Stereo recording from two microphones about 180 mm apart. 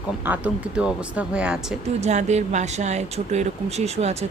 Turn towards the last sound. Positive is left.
turn(degrees=-35)  # may be behind; listen again after turning